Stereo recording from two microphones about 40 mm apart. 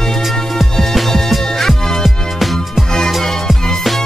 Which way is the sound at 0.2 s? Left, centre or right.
Centre.